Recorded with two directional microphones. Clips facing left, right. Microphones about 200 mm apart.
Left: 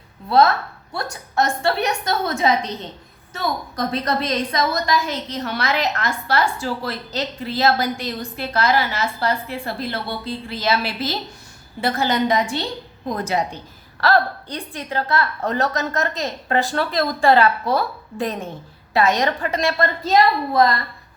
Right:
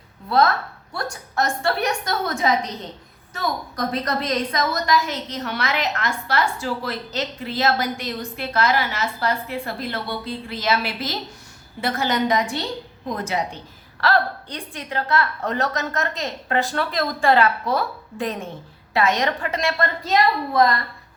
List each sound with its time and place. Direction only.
0.3 s a woman's voice: 25° left (ahead or behind)
3.8 s a woman's voice: 30° left (ahead or behind)